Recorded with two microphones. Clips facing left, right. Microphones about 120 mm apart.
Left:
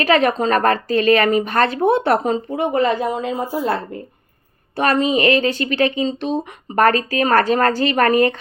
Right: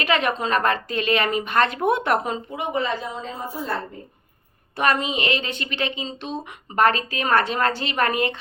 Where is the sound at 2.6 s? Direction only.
55° left (ahead or behind); by 4.0 s 75° left (ahead or behind).